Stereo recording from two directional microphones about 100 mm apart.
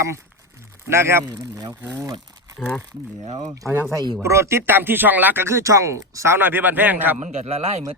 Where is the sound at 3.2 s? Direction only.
70° right (ahead or behind).